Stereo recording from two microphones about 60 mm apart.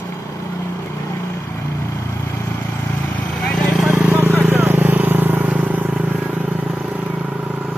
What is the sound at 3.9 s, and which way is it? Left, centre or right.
Vehicle, right.